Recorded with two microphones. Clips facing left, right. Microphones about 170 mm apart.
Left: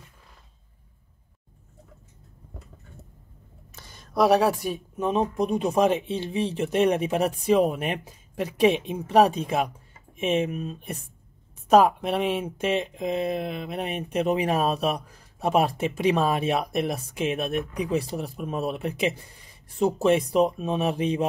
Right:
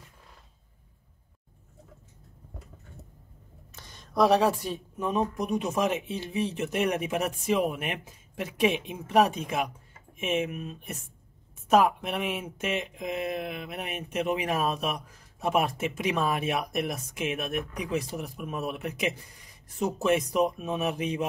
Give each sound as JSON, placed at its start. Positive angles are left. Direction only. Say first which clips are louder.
{"t": 3.7, "sound": "speech", "louder": "left 2 dB", "side_deg": 10}